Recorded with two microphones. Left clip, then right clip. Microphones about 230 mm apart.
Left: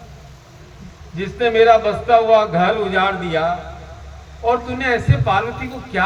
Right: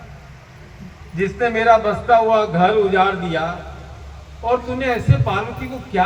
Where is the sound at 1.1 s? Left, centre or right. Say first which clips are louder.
Right 2 dB; left.